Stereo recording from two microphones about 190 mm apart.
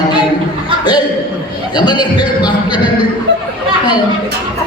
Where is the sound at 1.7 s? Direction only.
25° left (ahead or behind).